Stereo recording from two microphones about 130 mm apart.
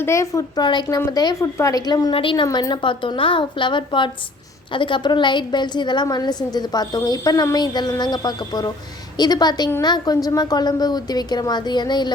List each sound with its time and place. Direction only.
0.0 s a woman's voice: 20° left (ahead or behind)